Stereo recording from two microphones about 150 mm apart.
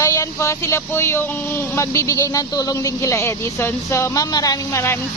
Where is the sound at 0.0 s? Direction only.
20° left (ahead or behind).